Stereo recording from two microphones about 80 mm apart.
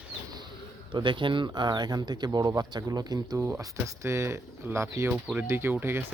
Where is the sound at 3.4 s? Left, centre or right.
Right.